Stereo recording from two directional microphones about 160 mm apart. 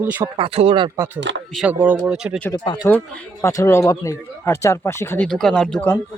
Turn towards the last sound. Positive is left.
turn(degrees=5)  # may be behind; listen again after turning